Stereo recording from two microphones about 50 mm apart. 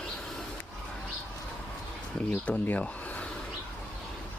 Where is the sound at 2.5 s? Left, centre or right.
Left.